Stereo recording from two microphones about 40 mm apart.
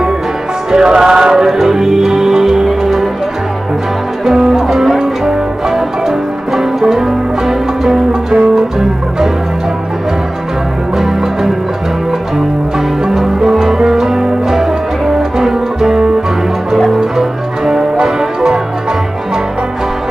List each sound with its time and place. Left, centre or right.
0.7 s music: centre
4.2 s music: centre
11.0 s music: centre
13.2 s music: centre